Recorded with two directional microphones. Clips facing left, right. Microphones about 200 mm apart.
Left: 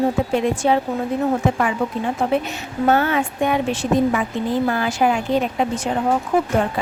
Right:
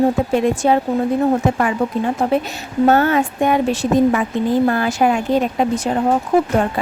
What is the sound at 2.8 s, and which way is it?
Speech, 45° right (ahead or behind).